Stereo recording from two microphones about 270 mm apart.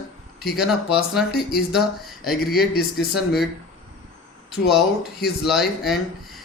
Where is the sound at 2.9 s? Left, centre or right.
Centre.